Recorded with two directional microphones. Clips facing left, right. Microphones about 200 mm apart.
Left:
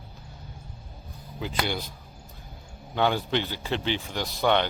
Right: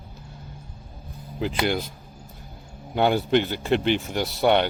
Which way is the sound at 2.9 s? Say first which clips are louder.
Right 4 dB; 10° right (ahead or behind).